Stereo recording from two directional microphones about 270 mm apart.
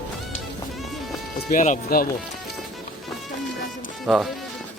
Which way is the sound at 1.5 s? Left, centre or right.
Left.